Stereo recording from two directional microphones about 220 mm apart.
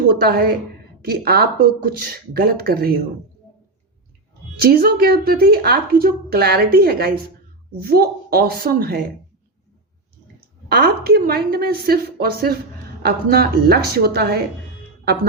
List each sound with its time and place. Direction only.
0.1 s speech: 45° right (ahead or behind)
4.6 s speech: 45° right (ahead or behind)
10.7 s speech: 45° right (ahead or behind)